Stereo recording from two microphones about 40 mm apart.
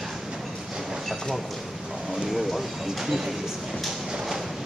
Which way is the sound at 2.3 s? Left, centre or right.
Centre.